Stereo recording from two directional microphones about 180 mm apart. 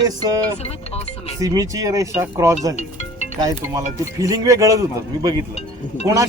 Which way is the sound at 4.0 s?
20° right (ahead or behind).